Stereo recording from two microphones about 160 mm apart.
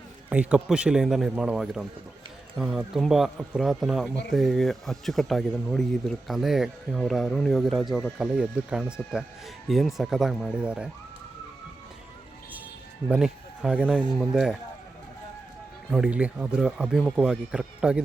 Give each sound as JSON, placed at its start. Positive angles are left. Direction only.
{"t": 0.3, "sound": "speech", "side_deg": -5}
{"t": 13.1, "sound": "speech", "side_deg": -5}
{"t": 15.9, "sound": "speech", "side_deg": -5}